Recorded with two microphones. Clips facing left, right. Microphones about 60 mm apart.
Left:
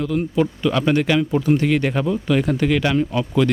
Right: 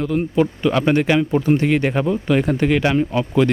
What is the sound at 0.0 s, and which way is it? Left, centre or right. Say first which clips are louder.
Speech: right 2 dB; right.